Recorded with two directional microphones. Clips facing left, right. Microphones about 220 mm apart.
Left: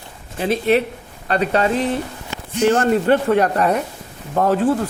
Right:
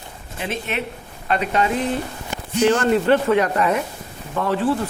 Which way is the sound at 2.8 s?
45° left (ahead or behind).